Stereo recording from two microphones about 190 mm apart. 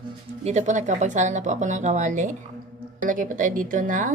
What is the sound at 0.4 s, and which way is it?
A woman's voice, 40° right (ahead or behind).